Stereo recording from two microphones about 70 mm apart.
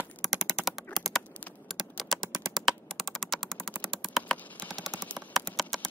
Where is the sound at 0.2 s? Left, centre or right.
Centre.